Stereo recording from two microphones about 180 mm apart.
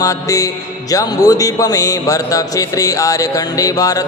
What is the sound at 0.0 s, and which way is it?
Music, 20° left (ahead or behind).